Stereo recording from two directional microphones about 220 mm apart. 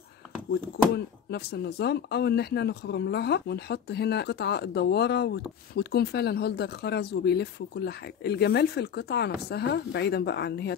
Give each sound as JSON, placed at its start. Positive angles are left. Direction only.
{"t": 0.9, "sound": "speech", "side_deg": 50}